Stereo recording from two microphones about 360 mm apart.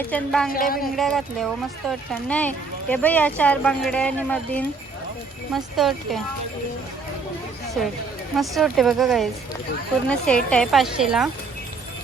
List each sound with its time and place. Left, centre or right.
0.1 s speech: centre
0.5 s speech: left
0.9 s speech: centre
8.4 s speech: centre